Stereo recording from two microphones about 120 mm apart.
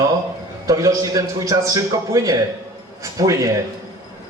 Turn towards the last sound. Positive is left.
turn(degrees=-30)  # may be behind; listen again after turning